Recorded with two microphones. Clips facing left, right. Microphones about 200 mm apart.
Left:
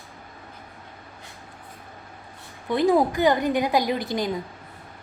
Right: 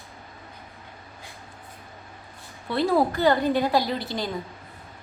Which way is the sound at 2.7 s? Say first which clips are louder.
Left 2 dB; 15° left (ahead or behind).